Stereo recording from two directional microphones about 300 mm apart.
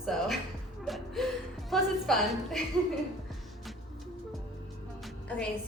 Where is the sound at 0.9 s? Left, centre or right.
Centre.